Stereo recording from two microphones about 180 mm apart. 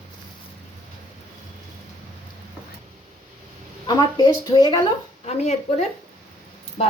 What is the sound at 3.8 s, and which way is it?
Speech, 20° left (ahead or behind).